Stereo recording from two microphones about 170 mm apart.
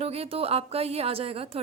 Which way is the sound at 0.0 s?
35° right (ahead or behind).